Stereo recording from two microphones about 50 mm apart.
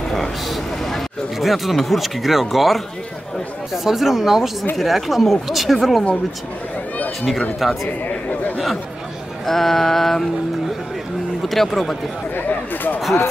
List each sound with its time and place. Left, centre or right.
0.1 s speech: centre
7.6 s speech: centre
9.5 s speech: centre
11.4 s speech: centre
12.4 s a sound: left